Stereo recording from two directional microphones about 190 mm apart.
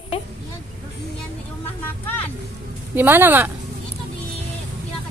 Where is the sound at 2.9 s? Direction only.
10° right (ahead or behind).